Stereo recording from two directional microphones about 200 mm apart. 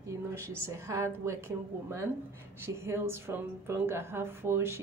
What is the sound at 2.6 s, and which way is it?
A woman's voice, 15° right (ahead or behind).